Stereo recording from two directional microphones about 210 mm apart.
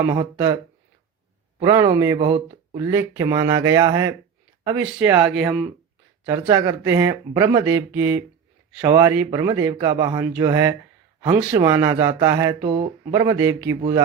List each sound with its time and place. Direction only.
0.1 s speech: 15° right (ahead or behind)
1.6 s speech: 15° right (ahead or behind)
6.3 s speech: 15° right (ahead or behind)
12.6 s speech: 25° right (ahead or behind)